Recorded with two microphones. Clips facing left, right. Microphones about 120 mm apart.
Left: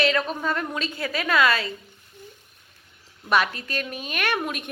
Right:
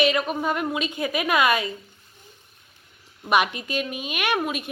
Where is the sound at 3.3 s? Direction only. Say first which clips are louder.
Right 1 dB; 15° right (ahead or behind).